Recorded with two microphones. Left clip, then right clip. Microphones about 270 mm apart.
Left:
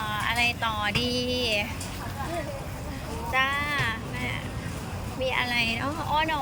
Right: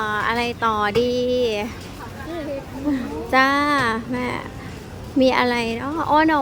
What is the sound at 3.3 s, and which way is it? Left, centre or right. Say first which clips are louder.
A woman's voice: right 9 dB; right.